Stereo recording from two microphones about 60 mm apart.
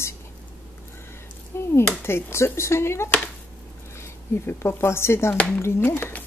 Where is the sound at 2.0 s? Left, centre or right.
Left.